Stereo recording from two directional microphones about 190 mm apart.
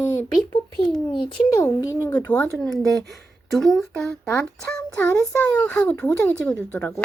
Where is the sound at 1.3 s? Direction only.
15° left (ahead or behind).